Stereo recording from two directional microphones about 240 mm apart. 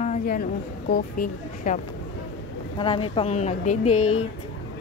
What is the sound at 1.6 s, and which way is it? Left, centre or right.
Speech, left.